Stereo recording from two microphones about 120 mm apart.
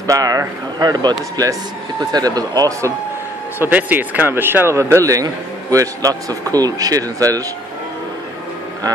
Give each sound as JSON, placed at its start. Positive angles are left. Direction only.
{"t": 0.0, "sound": "a man's voice", "side_deg": -30}
{"t": 3.5, "sound": "a man's voice", "side_deg": -15}